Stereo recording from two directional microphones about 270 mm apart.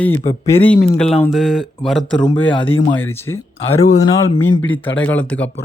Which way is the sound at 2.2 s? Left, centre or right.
Centre.